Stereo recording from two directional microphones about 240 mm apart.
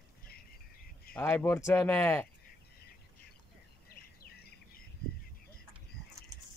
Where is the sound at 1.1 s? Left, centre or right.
Centre.